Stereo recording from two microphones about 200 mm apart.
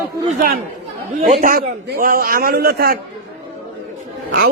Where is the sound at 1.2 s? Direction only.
40° right (ahead or behind).